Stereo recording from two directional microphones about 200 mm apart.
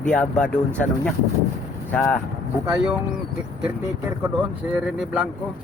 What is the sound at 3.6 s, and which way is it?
Speech, 10° right (ahead or behind).